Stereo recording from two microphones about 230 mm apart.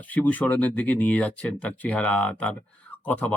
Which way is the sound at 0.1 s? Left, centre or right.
Centre.